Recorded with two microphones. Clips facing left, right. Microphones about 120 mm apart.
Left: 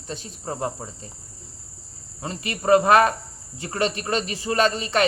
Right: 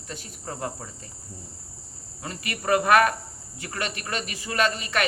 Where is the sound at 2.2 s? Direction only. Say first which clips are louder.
Left 4 dB; 25° left (ahead or behind).